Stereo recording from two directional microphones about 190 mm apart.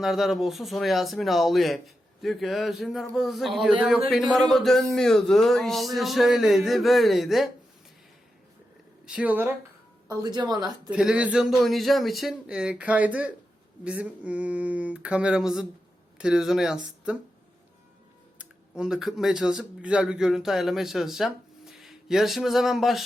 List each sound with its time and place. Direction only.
0.0 s speech: centre (ahead or behind)
9.0 s a sound: 5° right (ahead or behind)
10.1 s a woman's voice: 20° right (ahead or behind)
10.8 s speech: 5° right (ahead or behind)
13.8 s a sound: 5° right (ahead or behind)
16.1 s speech: 5° right (ahead or behind)
18.8 s speech: 5° right (ahead or behind)